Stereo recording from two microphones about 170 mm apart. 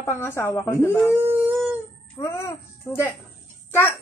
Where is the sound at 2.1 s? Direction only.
15° left (ahead or behind).